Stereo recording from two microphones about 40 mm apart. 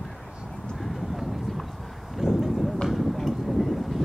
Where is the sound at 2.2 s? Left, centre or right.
Centre.